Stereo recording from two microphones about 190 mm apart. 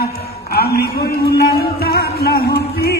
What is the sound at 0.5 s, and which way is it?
Speech, 55° left (ahead or behind).